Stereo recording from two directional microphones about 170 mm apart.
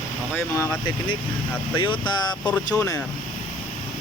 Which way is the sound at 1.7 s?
30° left (ahead or behind).